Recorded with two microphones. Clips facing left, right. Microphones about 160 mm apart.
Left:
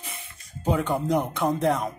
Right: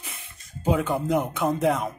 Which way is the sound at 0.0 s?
Centre (ahead or behind).